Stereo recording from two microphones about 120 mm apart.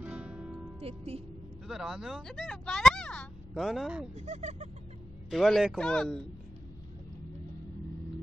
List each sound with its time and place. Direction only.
0.0 s music: 10° right (ahead or behind)
0.7 s speech: 60° right (ahead or behind)
1.7 s speech: 5° right (ahead or behind)
4.1 s speech: 70° right (ahead or behind)
5.3 s speech: centre (ahead or behind)